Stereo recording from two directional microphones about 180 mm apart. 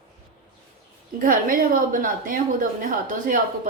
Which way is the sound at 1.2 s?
50° right (ahead or behind).